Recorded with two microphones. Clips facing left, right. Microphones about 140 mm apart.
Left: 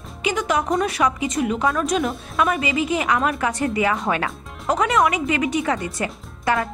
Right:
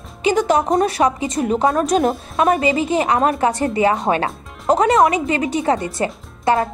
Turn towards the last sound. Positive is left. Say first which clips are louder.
# right 5 dB
turn(degrees=-30)  # may be behind; listen again after turning